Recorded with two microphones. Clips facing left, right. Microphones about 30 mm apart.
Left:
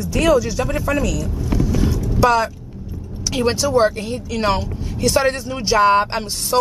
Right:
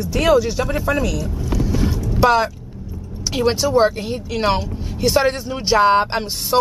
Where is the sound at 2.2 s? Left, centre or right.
Centre.